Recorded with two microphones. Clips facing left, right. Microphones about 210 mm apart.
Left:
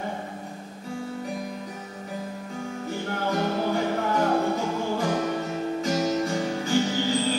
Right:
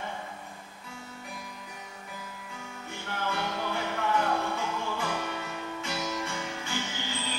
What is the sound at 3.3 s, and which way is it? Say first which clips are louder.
Music: left 8 dB; 40° left (ahead or behind).